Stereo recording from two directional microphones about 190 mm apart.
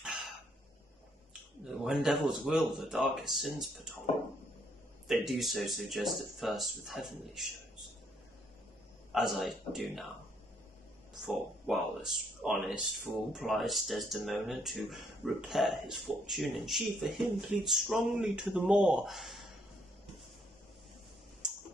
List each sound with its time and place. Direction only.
0.0 s a sound: centre (ahead or behind)
1.6 s speech: centre (ahead or behind)
5.0 s speech: centre (ahead or behind)
9.1 s speech: centre (ahead or behind)
11.1 s speech: centre (ahead or behind)